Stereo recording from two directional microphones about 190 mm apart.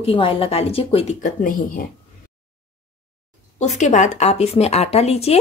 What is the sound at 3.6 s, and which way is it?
A woman's voice, 35° left (ahead or behind).